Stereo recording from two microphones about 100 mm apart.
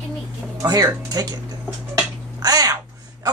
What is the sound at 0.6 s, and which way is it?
Speech, 40° right (ahead or behind).